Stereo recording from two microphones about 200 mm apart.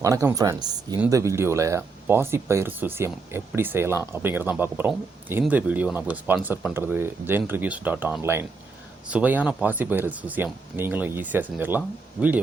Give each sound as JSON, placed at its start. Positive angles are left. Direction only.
{"t": 0.0, "sound": "speech", "side_deg": -15}